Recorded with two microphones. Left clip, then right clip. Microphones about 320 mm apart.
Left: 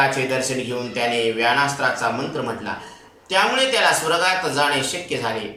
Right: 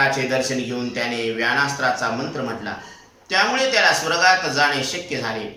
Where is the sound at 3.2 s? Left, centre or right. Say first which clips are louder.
Left 1 dB; centre.